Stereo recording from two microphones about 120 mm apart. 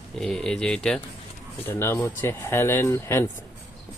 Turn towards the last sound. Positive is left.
turn(degrees=20)  # may be behind; listen again after turning